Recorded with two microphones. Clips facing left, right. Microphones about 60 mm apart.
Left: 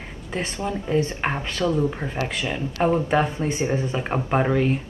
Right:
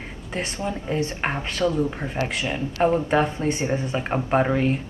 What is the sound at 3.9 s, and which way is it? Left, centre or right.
Speech, centre.